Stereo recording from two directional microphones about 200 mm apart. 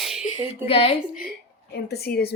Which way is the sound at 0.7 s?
30° left (ahead or behind).